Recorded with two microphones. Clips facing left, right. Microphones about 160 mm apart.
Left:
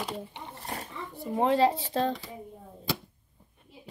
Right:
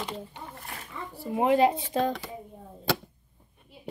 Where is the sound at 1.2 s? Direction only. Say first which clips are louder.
Right 2 dB; 10° right (ahead or behind).